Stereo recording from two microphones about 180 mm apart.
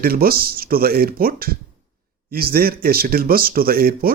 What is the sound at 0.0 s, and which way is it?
A man's voice, 55° right (ahead or behind).